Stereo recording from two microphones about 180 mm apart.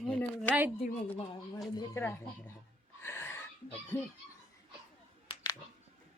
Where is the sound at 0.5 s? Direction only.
5° right (ahead or behind).